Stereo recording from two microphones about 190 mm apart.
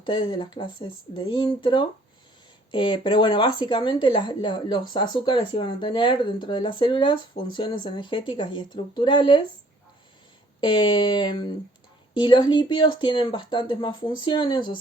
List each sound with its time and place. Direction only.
0.0 s speech: 25° left (ahead or behind)
10.6 s speech: 25° left (ahead or behind)